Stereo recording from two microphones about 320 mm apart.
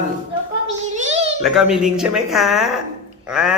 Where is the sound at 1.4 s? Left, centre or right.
Centre.